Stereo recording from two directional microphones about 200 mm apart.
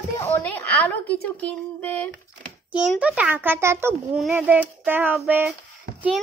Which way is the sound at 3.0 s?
5° right (ahead or behind).